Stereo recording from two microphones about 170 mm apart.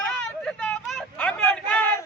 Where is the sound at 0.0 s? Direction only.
5° left (ahead or behind).